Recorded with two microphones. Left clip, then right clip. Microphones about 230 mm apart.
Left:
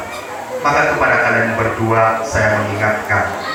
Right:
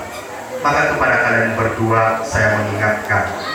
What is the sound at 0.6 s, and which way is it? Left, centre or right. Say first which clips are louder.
A man's voice: left 1 dB; centre.